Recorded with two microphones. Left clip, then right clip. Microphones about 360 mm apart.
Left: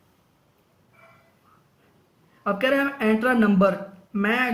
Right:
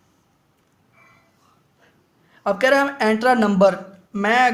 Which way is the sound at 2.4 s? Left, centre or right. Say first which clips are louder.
Right 5 dB; centre.